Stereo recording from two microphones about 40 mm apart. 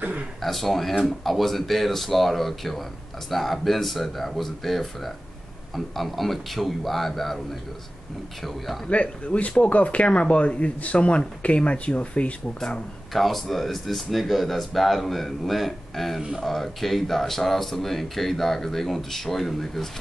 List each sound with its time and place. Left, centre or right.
0.4 s speech: centre
8.4 s speech: centre
8.8 s speech: left
13.1 s speech: centre